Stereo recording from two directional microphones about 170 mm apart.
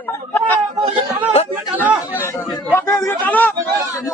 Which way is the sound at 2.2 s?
15° left (ahead or behind).